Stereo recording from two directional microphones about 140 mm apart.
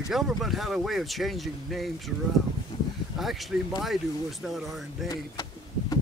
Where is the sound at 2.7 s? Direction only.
40° left (ahead or behind).